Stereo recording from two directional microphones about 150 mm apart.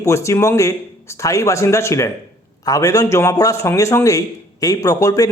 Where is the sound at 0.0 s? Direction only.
20° left (ahead or behind).